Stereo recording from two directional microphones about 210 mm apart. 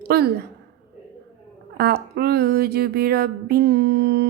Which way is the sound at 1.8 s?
50° right (ahead or behind).